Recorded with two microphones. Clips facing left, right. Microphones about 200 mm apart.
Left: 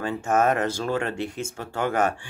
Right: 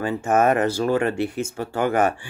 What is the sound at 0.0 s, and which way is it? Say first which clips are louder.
Speech: right 3 dB; 5° right (ahead or behind).